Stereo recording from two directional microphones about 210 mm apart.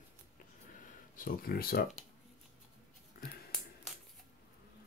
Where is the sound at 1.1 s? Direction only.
40° left (ahead or behind).